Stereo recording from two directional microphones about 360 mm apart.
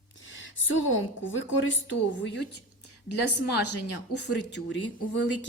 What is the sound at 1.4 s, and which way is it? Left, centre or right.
A woman's voice, left.